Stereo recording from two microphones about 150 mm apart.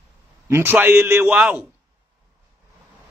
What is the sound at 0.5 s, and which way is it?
A man's voice, 15° right (ahead or behind).